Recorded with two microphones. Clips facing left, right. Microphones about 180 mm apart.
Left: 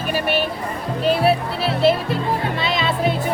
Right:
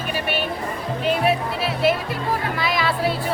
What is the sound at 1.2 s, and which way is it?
Music, 30° left (ahead or behind).